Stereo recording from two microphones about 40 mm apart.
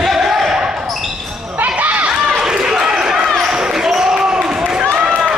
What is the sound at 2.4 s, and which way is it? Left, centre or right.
Basketball bounce, centre.